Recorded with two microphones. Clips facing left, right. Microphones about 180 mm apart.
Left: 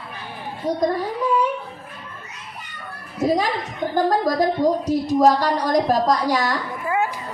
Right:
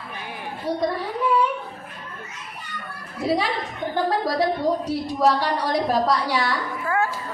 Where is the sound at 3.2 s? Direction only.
45° left (ahead or behind).